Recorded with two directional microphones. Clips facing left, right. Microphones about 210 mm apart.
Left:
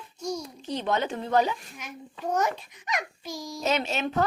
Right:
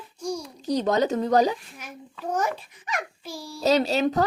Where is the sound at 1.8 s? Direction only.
10° right (ahead or behind).